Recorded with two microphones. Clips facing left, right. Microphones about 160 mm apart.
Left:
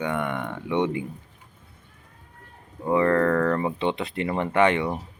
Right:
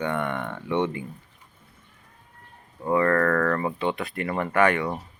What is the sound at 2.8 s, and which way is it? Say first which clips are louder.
Speech: left 1 dB; 15° left (ahead or behind).